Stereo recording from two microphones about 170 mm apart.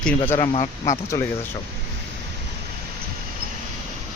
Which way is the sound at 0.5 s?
40° left (ahead or behind).